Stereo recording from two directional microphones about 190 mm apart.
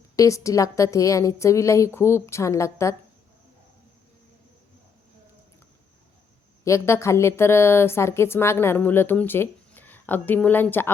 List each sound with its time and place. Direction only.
0.2 s a woman's voice: 15° left (ahead or behind)
6.7 s a woman's voice: 15° left (ahead or behind)